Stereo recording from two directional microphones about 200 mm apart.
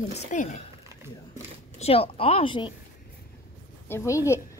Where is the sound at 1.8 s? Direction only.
30° left (ahead or behind).